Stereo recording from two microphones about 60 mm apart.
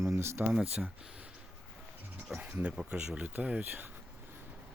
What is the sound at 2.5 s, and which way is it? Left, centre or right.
Speech, right.